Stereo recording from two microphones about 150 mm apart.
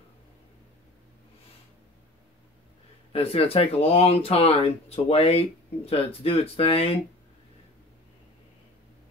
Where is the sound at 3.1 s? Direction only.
40° left (ahead or behind).